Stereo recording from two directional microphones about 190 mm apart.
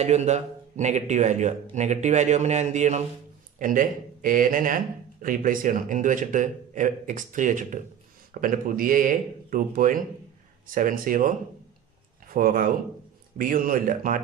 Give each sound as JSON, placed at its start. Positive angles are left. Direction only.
{"t": 0.0, "sound": "speech", "side_deg": -35}